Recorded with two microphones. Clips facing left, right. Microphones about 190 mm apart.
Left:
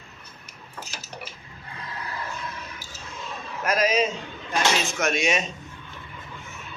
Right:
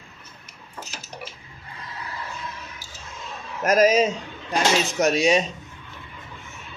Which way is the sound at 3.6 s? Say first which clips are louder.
Right 5 dB; 45° right (ahead or behind).